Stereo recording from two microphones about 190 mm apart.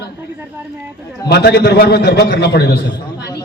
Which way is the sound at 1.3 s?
60° left (ahead or behind).